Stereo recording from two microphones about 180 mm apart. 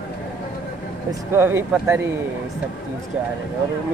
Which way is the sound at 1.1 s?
15° right (ahead or behind).